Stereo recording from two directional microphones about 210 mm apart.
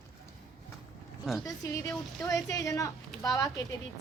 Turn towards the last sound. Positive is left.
turn(degrees=15)  # may be behind; listen again after turning